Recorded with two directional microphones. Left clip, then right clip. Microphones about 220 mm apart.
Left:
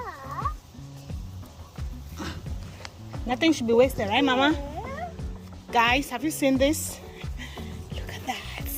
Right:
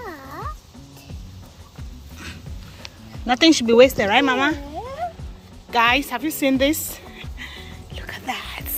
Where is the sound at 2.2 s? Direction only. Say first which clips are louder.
Left 1 dB; 30° left (ahead or behind).